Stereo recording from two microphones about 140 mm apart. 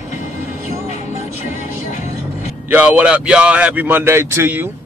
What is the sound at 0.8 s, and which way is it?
Music, 55° left (ahead or behind).